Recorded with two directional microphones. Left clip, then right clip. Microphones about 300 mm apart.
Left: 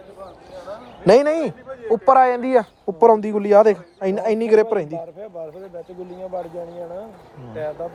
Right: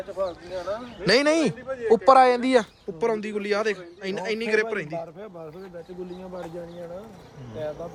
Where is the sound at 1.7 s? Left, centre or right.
Right.